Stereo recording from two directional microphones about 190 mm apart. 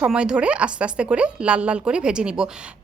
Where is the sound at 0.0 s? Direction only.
5° right (ahead or behind).